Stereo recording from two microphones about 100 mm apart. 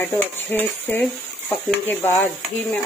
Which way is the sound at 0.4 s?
20° left (ahead or behind).